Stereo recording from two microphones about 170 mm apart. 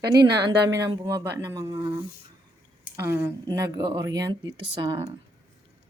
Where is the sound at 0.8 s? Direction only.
25° right (ahead or behind).